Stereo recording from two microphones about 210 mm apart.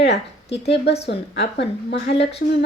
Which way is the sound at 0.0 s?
55° left (ahead or behind).